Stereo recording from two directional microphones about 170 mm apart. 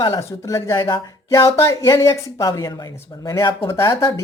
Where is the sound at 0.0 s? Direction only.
20° left (ahead or behind).